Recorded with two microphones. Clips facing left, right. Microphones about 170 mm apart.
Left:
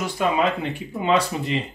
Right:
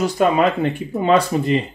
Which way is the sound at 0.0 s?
50° right (ahead or behind).